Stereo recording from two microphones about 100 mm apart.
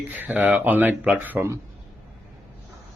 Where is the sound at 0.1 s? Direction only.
15° right (ahead or behind).